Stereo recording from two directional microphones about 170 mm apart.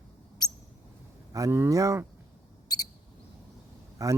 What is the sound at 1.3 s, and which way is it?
Speech, 15° right (ahead or behind).